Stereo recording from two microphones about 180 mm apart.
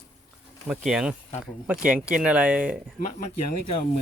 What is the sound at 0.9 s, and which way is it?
Speech, 5° right (ahead or behind).